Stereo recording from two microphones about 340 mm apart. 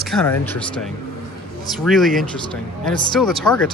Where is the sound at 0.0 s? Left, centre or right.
Centre.